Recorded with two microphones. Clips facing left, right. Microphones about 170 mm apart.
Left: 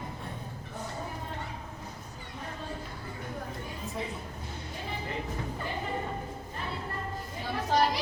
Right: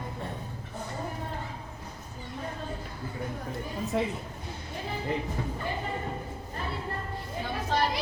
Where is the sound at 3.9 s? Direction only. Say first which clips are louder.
Right 8 dB; 80° right.